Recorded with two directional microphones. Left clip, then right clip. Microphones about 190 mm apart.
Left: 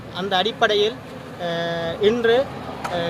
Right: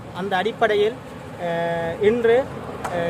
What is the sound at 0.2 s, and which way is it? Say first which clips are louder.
Speech: left 1 dB; 5° right (ahead or behind).